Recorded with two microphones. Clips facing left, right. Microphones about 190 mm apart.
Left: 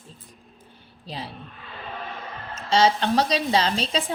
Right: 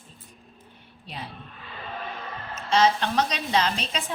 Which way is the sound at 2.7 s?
30° left (ahead or behind).